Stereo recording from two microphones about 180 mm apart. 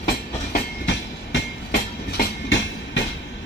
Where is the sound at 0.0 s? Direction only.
75° left (ahead or behind).